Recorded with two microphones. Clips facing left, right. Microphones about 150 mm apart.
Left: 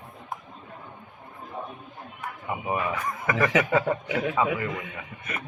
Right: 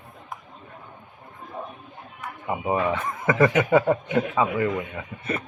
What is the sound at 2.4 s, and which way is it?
A man's voice, 25° right (ahead or behind).